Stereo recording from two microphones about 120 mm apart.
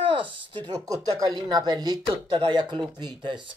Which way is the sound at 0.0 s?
45° right (ahead or behind).